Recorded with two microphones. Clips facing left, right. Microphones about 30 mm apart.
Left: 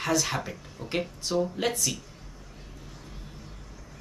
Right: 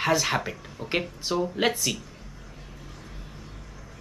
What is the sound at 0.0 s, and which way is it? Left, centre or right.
Speech, right.